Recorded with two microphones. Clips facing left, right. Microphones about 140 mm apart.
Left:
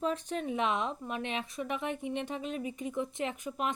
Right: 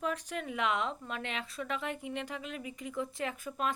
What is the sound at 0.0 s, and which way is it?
Speech, 25° left (ahead or behind).